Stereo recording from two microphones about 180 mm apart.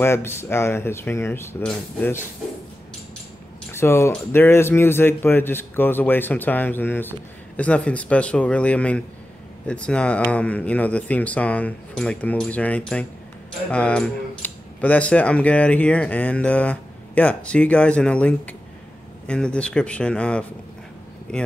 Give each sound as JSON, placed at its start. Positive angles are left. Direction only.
{"t": 0.0, "sound": "speech", "side_deg": 15}
{"t": 3.7, "sound": "speech", "side_deg": 15}